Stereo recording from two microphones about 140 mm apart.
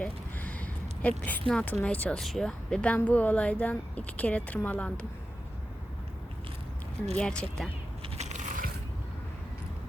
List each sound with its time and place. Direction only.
0.0 s a sound: 10° left (ahead or behind)
1.2 s a woman's voice: 10° left (ahead or behind)
7.2 s a woman's voice: 5° left (ahead or behind)
8.2 s biting: 65° right (ahead or behind)